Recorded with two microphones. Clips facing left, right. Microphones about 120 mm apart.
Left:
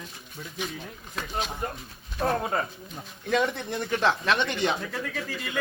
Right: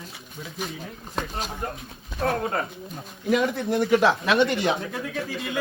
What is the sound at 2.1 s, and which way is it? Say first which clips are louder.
A man's voice: right 1 dB; centre (ahead or behind).